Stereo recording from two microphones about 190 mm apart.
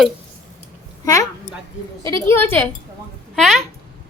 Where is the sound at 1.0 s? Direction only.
15° left (ahead or behind).